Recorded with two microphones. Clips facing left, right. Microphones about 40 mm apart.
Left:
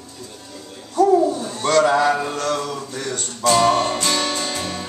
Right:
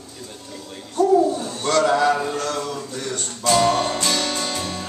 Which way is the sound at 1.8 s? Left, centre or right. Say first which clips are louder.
Left 1 dB; centre.